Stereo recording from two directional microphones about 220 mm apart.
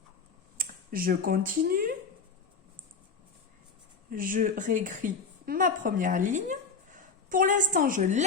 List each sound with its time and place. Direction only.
0.5 s speech: 40° right (ahead or behind)
4.1 s a woman's voice: 40° right (ahead or behind)